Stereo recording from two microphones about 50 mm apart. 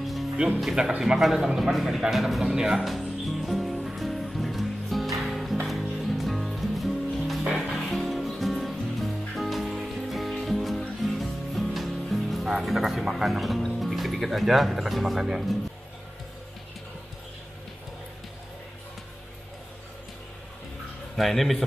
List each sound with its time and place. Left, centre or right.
0.7 s a man's voice: centre
2.4 s speech: centre
2.8 s music: centre
12.6 s a man's voice: centre
13.6 s music: centre
13.8 s speech: centre
21.2 s a man's voice: centre